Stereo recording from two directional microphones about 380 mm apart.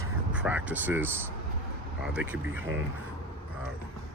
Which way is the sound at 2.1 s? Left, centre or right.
Centre.